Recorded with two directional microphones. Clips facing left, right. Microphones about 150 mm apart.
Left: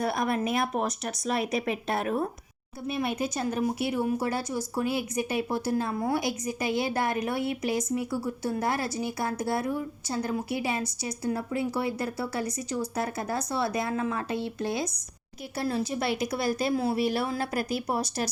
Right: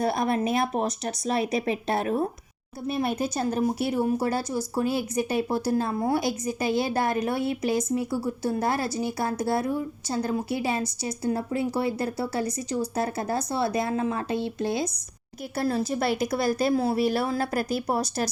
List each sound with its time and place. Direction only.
0.0 s a woman's voice: 30° right (ahead or behind)
15.5 s a woman's voice: 40° right (ahead or behind)